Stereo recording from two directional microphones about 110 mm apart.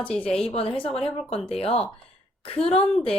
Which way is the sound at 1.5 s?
65° left (ahead or behind).